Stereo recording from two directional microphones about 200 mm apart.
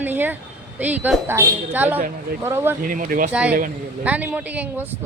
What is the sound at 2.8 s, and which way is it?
Speech, 45° right (ahead or behind).